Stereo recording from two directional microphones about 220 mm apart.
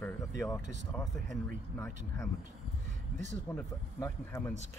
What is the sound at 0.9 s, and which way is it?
Speech, 10° left (ahead or behind).